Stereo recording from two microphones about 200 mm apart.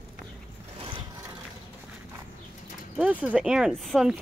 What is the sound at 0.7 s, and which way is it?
Vehicle, 25° right (ahead or behind).